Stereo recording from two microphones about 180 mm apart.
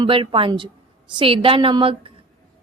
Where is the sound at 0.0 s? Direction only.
30° right (ahead or behind).